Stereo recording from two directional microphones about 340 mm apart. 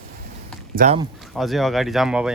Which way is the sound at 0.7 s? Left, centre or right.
Centre.